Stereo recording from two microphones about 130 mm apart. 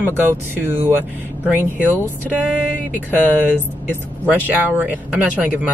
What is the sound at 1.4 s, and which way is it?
Speech, 15° left (ahead or behind).